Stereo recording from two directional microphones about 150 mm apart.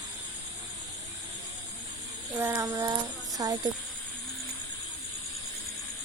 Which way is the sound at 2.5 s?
25° right (ahead or behind).